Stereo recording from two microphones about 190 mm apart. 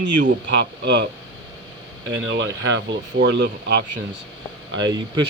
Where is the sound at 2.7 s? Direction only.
70° right (ahead or behind).